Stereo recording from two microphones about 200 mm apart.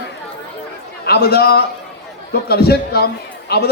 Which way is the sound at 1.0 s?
55° left (ahead or behind).